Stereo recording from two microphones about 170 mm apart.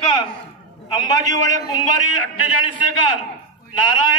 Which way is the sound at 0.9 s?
20° left (ahead or behind).